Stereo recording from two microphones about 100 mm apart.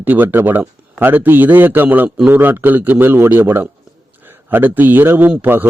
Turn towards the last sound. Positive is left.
turn(degrees=-20)  # may be behind; listen again after turning